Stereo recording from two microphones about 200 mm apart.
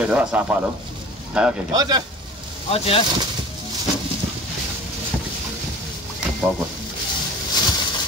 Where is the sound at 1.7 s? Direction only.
20° right (ahead or behind).